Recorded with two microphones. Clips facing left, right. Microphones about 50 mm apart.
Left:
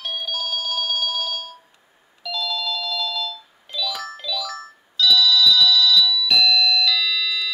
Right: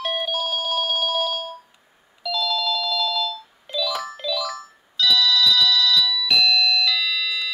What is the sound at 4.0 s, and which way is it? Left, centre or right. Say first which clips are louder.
Music: right 2 dB; centre.